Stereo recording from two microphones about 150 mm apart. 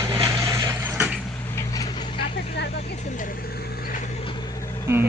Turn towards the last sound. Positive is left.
turn(degrees=20)  # may be behind; listen again after turning